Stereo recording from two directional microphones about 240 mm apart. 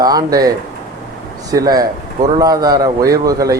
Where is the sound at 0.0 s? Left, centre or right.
Centre.